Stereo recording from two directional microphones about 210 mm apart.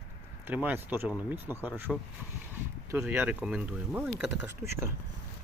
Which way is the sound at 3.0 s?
10° right (ahead or behind).